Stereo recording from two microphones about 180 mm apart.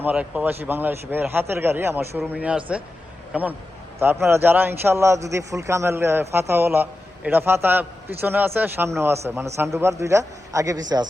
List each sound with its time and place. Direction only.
0.0 s a man's voice: 10° right (ahead or behind)